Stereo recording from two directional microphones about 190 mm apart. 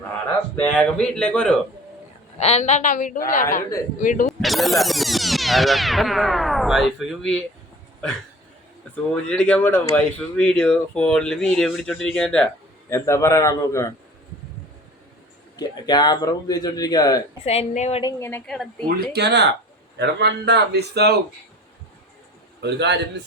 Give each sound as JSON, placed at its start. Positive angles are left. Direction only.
{"t": 0.5, "sound": "speech", "side_deg": 5}
{"t": 2.4, "sound": "a woman's voice", "side_deg": 35}
{"t": 4.3, "sound": "music", "side_deg": 0}
{"t": 9.2, "sound": "speech", "side_deg": 5}
{"t": 12.9, "sound": "a man's voice", "side_deg": 15}
{"t": 15.5, "sound": "speech", "side_deg": 20}
{"t": 17.4, "sound": "a woman's voice", "side_deg": 35}
{"t": 18.0, "sound": "a man's voice", "side_deg": 10}
{"t": 19.1, "sound": "a man's voice", "side_deg": -60}
{"t": 22.6, "sound": "a man's voice", "side_deg": -65}